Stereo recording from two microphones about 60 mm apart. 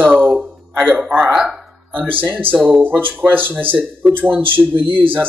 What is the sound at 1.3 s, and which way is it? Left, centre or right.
Speech, centre.